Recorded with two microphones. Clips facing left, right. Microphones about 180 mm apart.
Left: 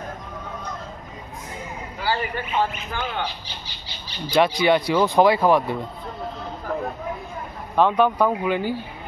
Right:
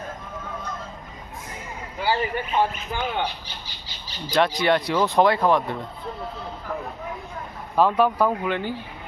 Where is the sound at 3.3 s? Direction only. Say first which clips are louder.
Even; 45° right (ahead or behind).